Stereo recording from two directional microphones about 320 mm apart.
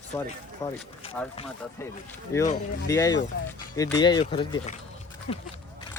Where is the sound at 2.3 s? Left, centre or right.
Centre.